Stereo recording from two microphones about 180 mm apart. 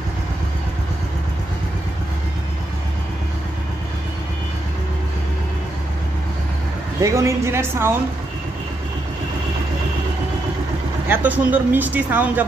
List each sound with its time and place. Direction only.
7.0 s speech: 15° right (ahead or behind)
11.1 s speech: 10° right (ahead or behind)